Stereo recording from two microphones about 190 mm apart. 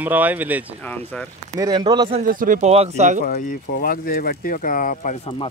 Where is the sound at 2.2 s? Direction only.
45° right (ahead or behind).